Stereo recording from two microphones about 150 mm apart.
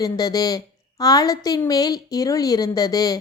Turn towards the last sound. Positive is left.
turn(degrees=25)  # may be behind; listen again after turning